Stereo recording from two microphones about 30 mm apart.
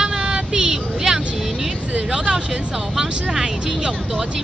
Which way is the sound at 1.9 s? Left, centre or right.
Right.